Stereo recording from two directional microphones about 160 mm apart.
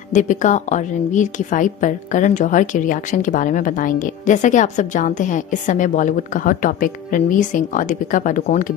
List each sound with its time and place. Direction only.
0.1 s a woman's voice: 50° left (ahead or behind)